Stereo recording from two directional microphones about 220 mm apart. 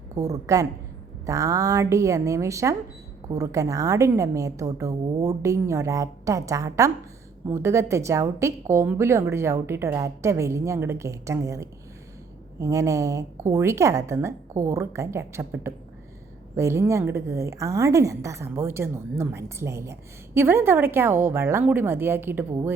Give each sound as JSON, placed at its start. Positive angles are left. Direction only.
{"t": 0.2, "sound": "a woman's voice", "side_deg": -15}